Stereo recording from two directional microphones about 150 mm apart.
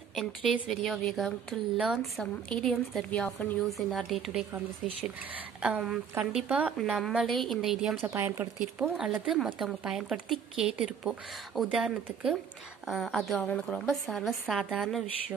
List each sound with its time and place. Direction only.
0.1 s a woman's voice: centre (ahead or behind)
5.6 s a woman's voice: 5° right (ahead or behind)
8.0 s a woman's voice: 15° right (ahead or behind)
8.8 s a woman's voice: 5° right (ahead or behind)